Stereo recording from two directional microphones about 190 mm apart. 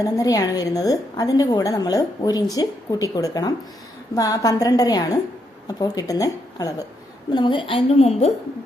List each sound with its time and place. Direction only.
0.0 s a woman's voice: 20° left (ahead or behind)